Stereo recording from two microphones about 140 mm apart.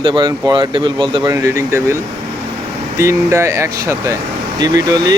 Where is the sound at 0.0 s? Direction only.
35° right (ahead or behind).